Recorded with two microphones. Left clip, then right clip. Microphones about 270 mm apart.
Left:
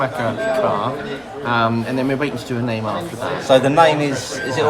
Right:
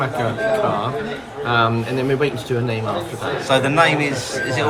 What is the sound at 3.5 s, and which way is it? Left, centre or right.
Speech, centre.